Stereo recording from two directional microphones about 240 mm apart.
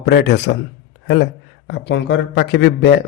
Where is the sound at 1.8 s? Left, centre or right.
Left.